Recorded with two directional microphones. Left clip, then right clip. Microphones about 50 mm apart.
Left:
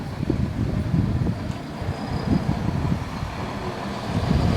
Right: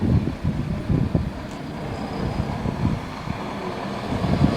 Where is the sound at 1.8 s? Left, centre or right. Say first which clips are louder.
Even; centre.